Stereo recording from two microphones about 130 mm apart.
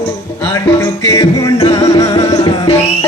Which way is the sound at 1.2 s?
30° left (ahead or behind).